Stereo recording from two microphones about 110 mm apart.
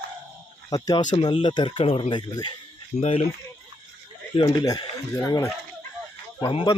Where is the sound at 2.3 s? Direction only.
40° left (ahead or behind).